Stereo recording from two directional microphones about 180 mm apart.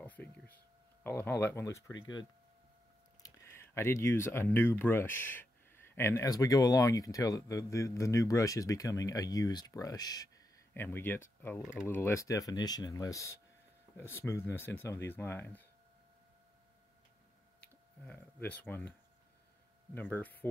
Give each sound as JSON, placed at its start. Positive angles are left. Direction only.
{"t": 0.0, "sound": "a sound", "side_deg": 10}
{"t": 1.0, "sound": "speech", "side_deg": 10}
{"t": 17.6, "sound": "speech", "side_deg": 10}